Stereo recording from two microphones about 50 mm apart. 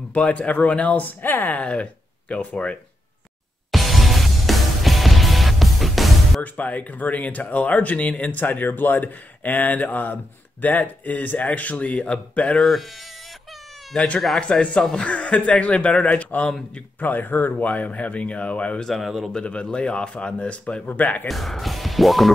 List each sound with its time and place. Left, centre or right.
0.1 s speech: left
3.7 s music: centre
6.4 s speech: left
12.5 s speech: centre
14.4 s speech: left
14.8 s speech: centre
15.0 s speech: left
18.8 s speech: centre
19.3 s speech: left
21.3 s speech: centre